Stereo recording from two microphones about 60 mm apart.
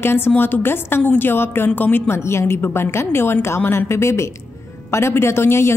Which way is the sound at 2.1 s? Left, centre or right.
Left.